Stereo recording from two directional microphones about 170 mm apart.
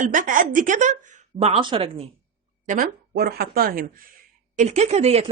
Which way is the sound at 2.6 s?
50° right (ahead or behind).